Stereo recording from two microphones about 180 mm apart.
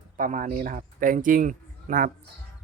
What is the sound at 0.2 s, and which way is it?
Speech, 50° right (ahead or behind).